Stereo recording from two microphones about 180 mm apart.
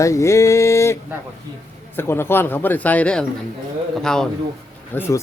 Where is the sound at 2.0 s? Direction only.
15° left (ahead or behind).